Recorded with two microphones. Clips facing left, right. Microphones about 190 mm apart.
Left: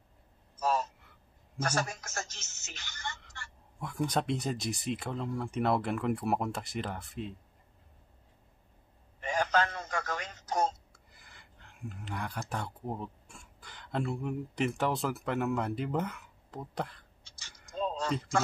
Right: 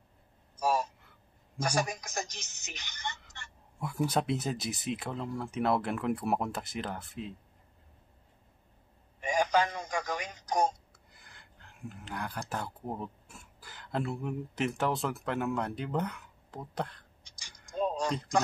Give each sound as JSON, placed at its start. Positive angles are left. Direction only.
{"t": 0.6, "sound": "a sound", "side_deg": -10}
{"t": 1.6, "sound": "speech", "side_deg": -15}
{"t": 3.8, "sound": "speech", "side_deg": -5}
{"t": 9.2, "sound": "telephone", "side_deg": -15}
{"t": 10.9, "sound": "speech", "side_deg": 0}
{"t": 17.2, "sound": "typing", "side_deg": -15}